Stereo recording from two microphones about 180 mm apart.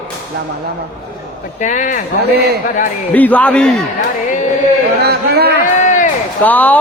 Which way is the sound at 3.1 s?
10° left (ahead or behind).